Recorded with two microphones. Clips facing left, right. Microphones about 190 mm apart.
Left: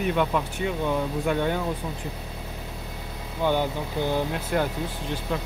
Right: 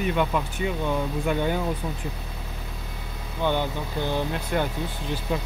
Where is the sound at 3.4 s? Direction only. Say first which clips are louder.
Left 1 dB; 10° left (ahead or behind).